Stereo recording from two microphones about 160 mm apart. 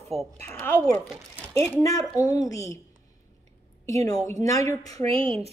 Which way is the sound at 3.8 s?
20° left (ahead or behind).